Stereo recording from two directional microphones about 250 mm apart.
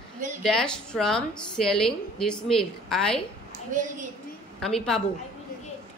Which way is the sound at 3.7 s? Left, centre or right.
Right.